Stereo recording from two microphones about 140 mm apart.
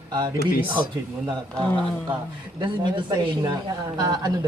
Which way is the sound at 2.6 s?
30° right (ahead or behind).